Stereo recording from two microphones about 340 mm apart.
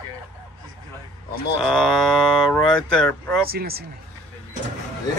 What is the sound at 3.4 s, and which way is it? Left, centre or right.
Speech, right.